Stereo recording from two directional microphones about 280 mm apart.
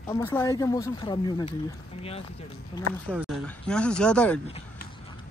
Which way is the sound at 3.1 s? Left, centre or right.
Centre.